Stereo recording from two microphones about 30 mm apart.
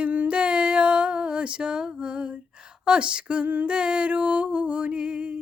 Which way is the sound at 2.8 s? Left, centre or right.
Right.